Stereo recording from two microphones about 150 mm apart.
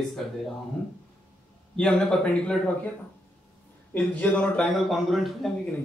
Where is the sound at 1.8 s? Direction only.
5° left (ahead or behind).